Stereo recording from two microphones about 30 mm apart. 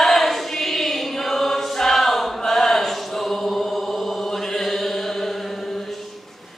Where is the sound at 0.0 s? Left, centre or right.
Centre.